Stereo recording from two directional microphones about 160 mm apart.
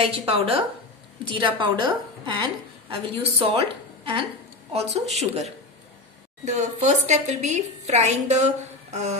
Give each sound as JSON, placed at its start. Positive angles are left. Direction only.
{"t": 0.3, "sound": "a woman's voice", "side_deg": -35}